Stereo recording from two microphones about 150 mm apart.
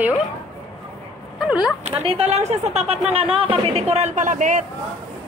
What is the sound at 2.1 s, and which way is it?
A man's voice, 40° right (ahead or behind).